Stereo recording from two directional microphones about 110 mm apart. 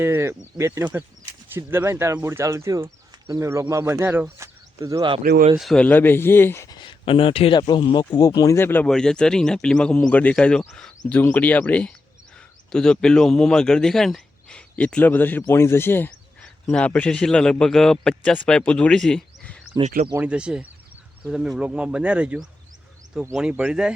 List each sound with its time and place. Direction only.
0.0 s speech: 25° right (ahead or behind)
5.0 s speech: 50° right (ahead or behind)
5.5 s speech: centre (ahead or behind)
5.8 s speech: 15° left (ahead or behind)
6.7 s speech: 45° left (ahead or behind)
7.7 s speech: 45° left (ahead or behind)
8.5 s speech: 20° left (ahead or behind)
8.9 s speech: 5° left (ahead or behind)
19.7 s speech: 30° right (ahead or behind)
20.2 s speech: 10° right (ahead or behind)